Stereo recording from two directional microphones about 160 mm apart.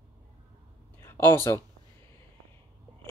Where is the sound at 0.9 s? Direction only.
15° left (ahead or behind).